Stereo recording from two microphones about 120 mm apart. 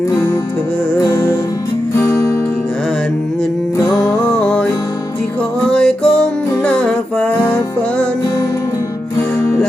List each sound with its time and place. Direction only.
1.0 s music: 30° left (ahead or behind)
4.3 s music: 10° left (ahead or behind)
5.6 s music: 5° left (ahead or behind)
9.4 s music: 10° left (ahead or behind)